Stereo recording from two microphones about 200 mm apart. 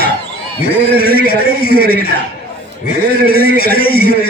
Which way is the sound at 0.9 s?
50° left (ahead or behind).